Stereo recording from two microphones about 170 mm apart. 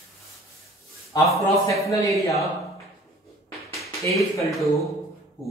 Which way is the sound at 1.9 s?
20° left (ahead or behind).